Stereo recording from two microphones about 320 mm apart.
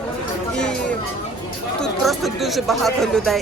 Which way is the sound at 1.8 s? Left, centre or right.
Centre.